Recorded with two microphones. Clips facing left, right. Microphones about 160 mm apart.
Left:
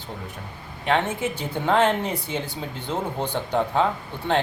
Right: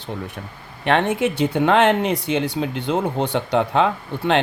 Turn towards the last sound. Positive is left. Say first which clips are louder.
# right 4 dB
turn(degrees=-80)